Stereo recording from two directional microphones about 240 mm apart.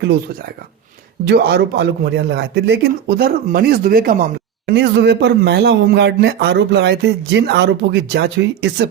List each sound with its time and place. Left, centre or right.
1.3 s a man's voice: right